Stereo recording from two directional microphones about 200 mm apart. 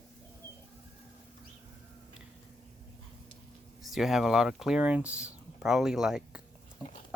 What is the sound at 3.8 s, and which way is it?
Speech, centre (ahead or behind).